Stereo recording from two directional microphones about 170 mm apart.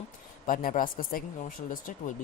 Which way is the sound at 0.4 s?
55° left (ahead or behind).